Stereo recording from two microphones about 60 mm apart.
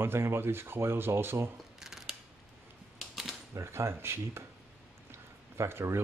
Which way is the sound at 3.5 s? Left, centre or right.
Right.